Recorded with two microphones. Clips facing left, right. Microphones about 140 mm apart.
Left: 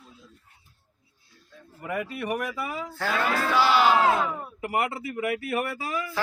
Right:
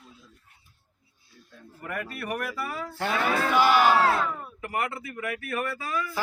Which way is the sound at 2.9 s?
20° right (ahead or behind).